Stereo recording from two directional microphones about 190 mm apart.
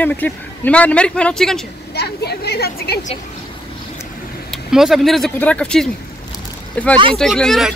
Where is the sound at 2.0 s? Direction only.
60° left (ahead or behind).